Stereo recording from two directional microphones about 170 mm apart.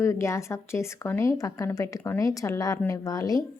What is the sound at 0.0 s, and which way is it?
A woman's voice, 15° left (ahead or behind).